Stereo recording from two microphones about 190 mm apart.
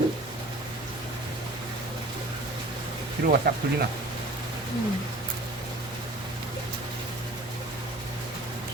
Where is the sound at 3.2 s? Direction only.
55° right (ahead or behind).